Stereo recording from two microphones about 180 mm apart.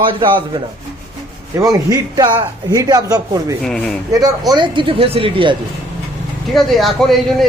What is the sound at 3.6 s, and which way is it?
Speech, 5° left (ahead or behind).